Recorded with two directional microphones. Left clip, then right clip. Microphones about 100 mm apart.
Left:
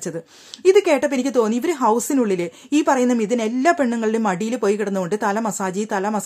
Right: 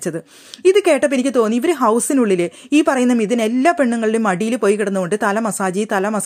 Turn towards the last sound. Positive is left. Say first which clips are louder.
# right 4 dB
turn(degrees=-25)  # may be behind; listen again after turning